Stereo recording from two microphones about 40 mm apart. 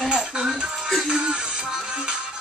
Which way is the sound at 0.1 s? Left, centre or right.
Centre.